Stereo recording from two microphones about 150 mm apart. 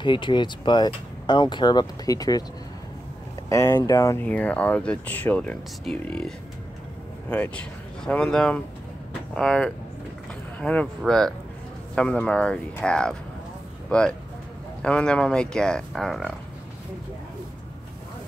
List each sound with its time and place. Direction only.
0.0 s speech: 30° left (ahead or behind)
3.4 s speech: 20° left (ahead or behind)
4.3 s speech: 10° left (ahead or behind)